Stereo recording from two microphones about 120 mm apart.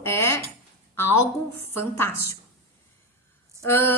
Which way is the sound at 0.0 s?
20° left (ahead or behind).